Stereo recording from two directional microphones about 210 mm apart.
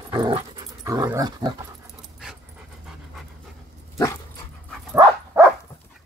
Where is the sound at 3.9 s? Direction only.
15° left (ahead or behind).